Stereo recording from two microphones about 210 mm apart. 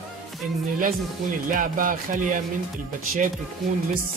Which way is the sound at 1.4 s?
40° right (ahead or behind).